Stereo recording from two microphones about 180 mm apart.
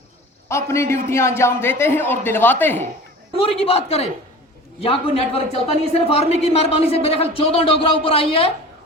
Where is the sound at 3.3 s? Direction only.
30° left (ahead or behind).